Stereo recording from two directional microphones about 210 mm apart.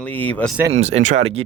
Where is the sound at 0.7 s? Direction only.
30° right (ahead or behind).